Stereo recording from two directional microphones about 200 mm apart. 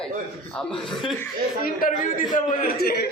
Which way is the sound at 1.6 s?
45° left (ahead or behind).